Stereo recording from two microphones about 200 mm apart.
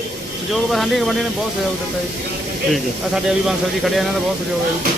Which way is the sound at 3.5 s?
Centre (ahead or behind).